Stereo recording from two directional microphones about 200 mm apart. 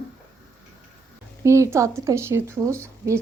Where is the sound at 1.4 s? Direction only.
15° right (ahead or behind).